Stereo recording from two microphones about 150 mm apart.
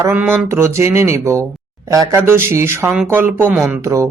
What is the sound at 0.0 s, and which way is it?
Speech, 15° right (ahead or behind).